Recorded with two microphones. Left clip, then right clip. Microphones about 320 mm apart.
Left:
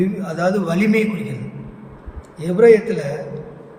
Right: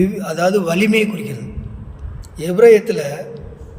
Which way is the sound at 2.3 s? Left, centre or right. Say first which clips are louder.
Right 2 dB; right.